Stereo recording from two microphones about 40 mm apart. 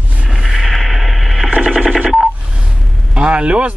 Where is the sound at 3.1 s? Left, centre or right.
Right.